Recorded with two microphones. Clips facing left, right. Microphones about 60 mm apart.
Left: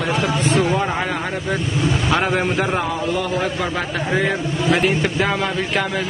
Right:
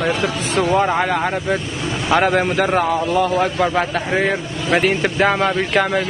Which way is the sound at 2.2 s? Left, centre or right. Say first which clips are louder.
Right 3 dB; centre.